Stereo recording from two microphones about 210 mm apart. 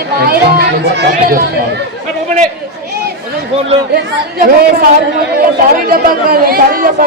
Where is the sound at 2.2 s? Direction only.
35° right (ahead or behind).